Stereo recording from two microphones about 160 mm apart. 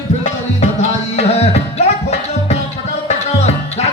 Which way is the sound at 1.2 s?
40° left (ahead or behind).